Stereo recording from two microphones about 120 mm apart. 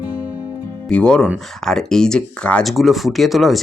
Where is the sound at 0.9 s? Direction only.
5° left (ahead or behind).